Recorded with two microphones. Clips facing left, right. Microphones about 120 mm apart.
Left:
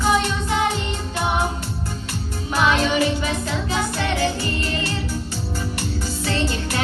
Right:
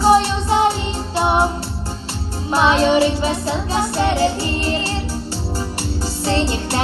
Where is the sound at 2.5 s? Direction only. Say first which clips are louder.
Right 5 dB; 30° right (ahead or behind).